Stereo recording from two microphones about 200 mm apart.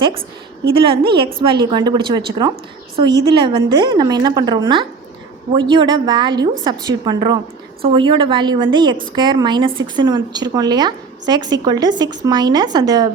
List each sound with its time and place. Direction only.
0.7 s a woman's voice: 25° right (ahead or behind)